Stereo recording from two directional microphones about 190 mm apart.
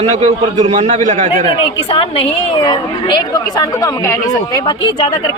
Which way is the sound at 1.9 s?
30° left (ahead or behind).